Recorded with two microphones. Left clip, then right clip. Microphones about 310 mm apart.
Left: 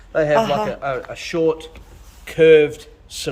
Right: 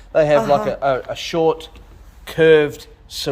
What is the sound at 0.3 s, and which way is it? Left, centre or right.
Speech, centre.